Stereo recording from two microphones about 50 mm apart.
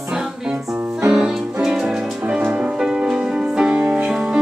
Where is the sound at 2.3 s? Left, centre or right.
Right.